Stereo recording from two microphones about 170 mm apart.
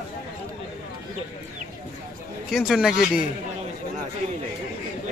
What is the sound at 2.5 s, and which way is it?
Speech, centre (ahead or behind).